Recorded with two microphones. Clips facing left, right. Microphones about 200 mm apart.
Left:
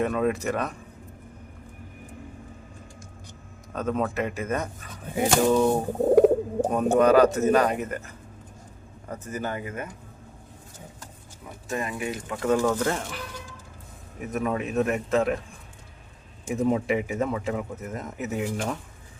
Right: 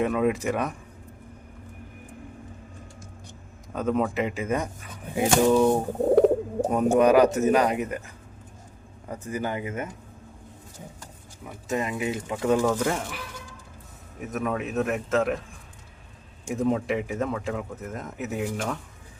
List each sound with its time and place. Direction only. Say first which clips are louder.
0.0 s speech: right 1 dB; 10° right (ahead or behind)
3.7 s speech: right 2 dB; 10° right (ahead or behind)
6.1 s bird: left 2 dB; 10° left (ahead or behind)
6.7 s speech: right 1 dB; 10° right (ahead or behind)
11.7 s speech: right 3 dB; 20° right (ahead or behind); by 15.4 s centre (ahead or behind)
16.5 s speech: left 1 dB; centre (ahead or behind)